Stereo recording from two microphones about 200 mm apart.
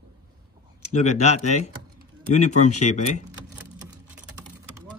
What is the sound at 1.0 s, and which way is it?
Speech, 35° left (ahead or behind).